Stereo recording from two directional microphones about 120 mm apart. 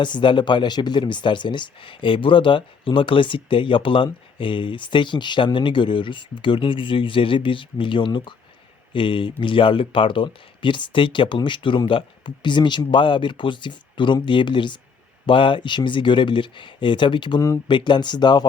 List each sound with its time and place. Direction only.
0.0 s speech: 40° left (ahead or behind)